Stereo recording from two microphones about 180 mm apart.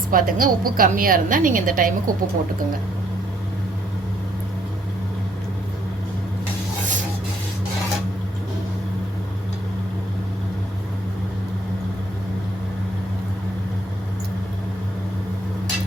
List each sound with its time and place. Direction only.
0.1 s a woman's voice: 50° right (ahead or behind)